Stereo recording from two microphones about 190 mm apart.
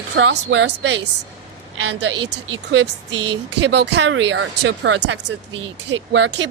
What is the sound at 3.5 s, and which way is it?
Speech, 65° right (ahead or behind).